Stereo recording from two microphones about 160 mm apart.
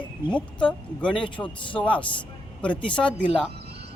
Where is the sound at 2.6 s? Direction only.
30° left (ahead or behind).